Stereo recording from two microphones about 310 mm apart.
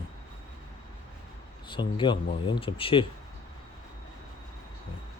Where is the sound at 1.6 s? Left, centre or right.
Centre.